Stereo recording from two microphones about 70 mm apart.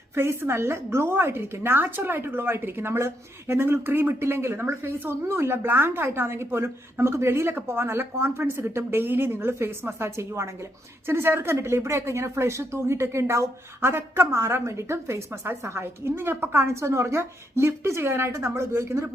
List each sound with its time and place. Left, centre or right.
0.1 s a woman's voice: right